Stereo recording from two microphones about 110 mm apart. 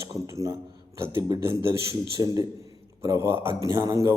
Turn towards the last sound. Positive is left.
turn(degrees=-25)  # may be behind; listen again after turning